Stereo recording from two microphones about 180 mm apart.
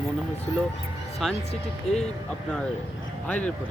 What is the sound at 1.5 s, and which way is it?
Speech, 35° left (ahead or behind).